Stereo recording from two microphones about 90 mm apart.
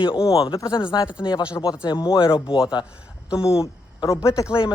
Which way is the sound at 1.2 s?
50° left (ahead or behind).